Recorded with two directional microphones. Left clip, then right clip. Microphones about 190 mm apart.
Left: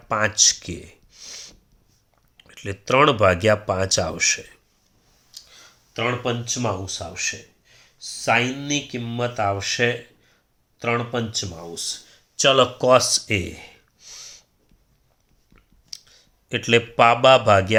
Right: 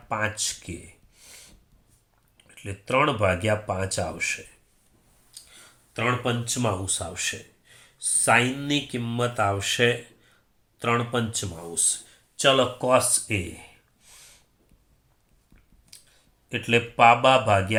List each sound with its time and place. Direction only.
0.1 s a sound: 55° left (ahead or behind)
2.4 s speech: 55° left (ahead or behind)
5.3 s speech: 30° left (ahead or behind)
12.4 s speech: 35° left (ahead or behind)
12.8 s a sound: 55° left (ahead or behind)
15.9 s speech: 55° left (ahead or behind)